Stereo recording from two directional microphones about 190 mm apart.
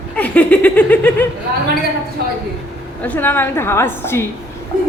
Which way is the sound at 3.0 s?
10° left (ahead or behind).